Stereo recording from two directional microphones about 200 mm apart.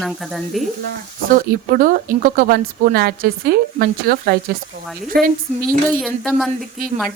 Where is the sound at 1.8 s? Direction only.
45° right (ahead or behind).